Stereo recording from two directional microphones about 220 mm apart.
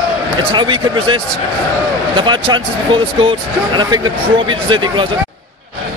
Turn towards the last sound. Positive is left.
turn(degrees=-20)  # may be behind; listen again after turning